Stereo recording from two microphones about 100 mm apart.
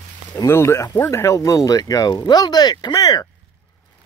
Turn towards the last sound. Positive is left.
turn(degrees=40)  # may be behind; listen again after turning